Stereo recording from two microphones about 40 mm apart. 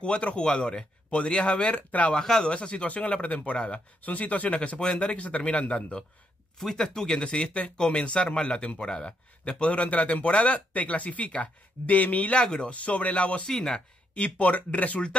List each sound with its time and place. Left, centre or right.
0.0 s a man's voice: left
1.8 s speech: left
2.1 s speech: centre
2.4 s a man's voice: left
4.0 s a man's voice: left
6.6 s speech: centre
7.1 s a man's voice: left
12.4 s a man's voice: left
12.7 s a man's voice: left
13.5 s speech: centre
14.1 s a man's voice: left